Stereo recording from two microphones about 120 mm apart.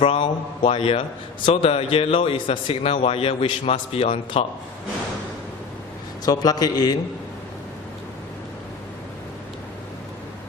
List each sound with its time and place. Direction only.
0.0 s a man's voice: 50° left (ahead or behind)
6.2 s a man's voice: 30° left (ahead or behind)